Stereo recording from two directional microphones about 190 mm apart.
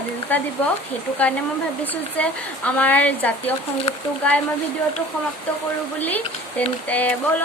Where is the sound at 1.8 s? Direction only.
10° left (ahead or behind).